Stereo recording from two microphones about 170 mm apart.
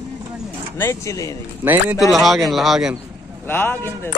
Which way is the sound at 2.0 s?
Centre (ahead or behind).